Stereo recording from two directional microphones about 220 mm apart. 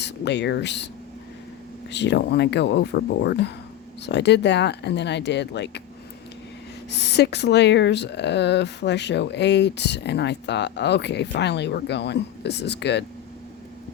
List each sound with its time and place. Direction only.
0.0 s speech: 50° left (ahead or behind)
1.9 s speech: 50° left (ahead or behind)
6.9 s speech: 50° left (ahead or behind)